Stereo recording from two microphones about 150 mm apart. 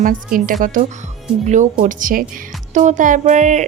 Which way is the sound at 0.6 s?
65° right (ahead or behind).